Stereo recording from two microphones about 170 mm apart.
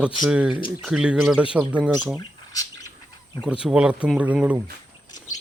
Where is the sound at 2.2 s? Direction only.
20° left (ahead or behind).